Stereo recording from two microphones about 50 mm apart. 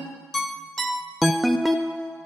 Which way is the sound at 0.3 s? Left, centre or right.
Centre.